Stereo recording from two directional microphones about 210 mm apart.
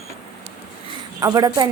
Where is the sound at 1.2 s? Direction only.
15° right (ahead or behind).